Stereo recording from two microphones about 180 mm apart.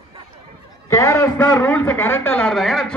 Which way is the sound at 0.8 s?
15° left (ahead or behind).